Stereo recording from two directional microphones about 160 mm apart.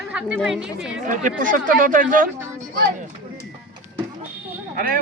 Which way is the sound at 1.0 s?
55° right (ahead or behind).